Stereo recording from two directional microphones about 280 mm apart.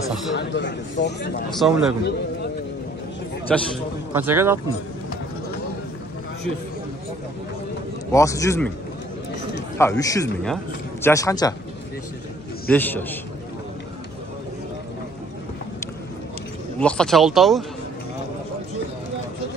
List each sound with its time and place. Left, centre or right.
0.4 s speech: left
1.5 s speech: centre
3.4 s speech: centre
4.1 s speech: centre
8.1 s a man's voice: centre
9.8 s a man's voice: centre
12.6 s a man's voice: centre
16.8 s speech: centre